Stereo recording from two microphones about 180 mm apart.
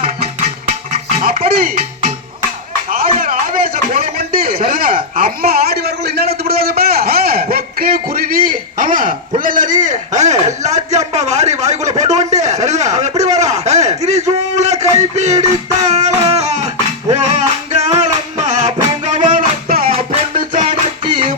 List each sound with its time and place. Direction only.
1.5 s speech: 55° right (ahead or behind)
2.9 s a sound: 50° right (ahead or behind)
6.4 s a man's voice: 55° right (ahead or behind); by 15.4 s 40° right (ahead or behind)
15.9 s music: 40° right (ahead or behind)
20.5 s music: 40° right (ahead or behind)